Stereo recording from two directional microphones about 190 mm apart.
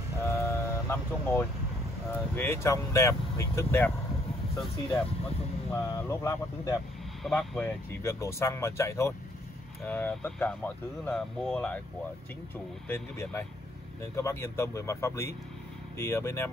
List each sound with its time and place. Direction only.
0.2 s vehicle: 15° left (ahead or behind)
2.1 s speech: 10° left (ahead or behind)
5.7 s speech: 15° left (ahead or behind)
12.8 s speech: 10° left (ahead or behind)